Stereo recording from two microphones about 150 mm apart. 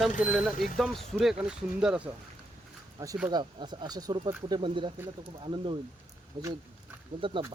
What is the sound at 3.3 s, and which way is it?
Speech, 30° right (ahead or behind).